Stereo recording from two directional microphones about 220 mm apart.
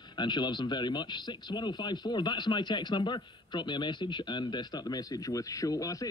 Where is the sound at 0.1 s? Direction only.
20° left (ahead or behind).